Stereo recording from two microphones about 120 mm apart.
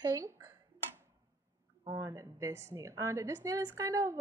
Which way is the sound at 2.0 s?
25° right (ahead or behind).